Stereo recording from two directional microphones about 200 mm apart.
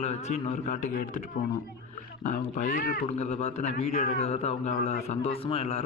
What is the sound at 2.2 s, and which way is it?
Speech, 40° left (ahead or behind).